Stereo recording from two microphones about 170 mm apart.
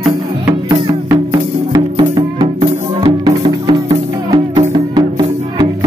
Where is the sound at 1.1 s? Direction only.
20° right (ahead or behind).